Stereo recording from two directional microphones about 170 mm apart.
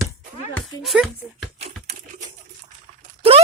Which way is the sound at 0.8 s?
Centre (ahead or behind).